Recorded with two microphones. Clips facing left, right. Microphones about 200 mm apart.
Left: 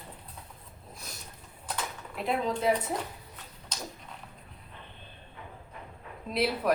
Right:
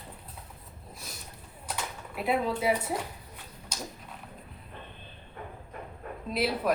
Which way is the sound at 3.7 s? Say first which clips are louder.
Right 1 dB; 10° right (ahead or behind).